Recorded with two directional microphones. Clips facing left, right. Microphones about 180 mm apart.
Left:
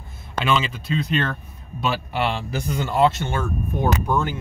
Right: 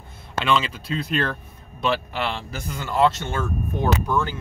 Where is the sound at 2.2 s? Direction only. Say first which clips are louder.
Left 4 dB; 15° left (ahead or behind).